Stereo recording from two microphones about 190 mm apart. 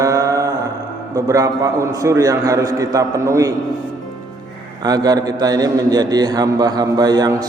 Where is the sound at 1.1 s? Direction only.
15° right (ahead or behind).